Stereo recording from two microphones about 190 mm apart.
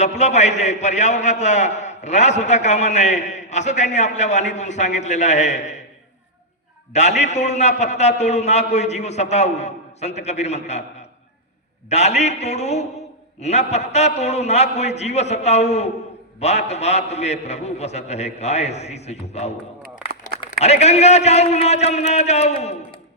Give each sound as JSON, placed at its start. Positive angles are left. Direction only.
{"t": 0.0, "sound": "a man's voice", "side_deg": 35}
{"t": 6.9, "sound": "a man's voice", "side_deg": 35}
{"t": 11.9, "sound": "a man's voice", "side_deg": 35}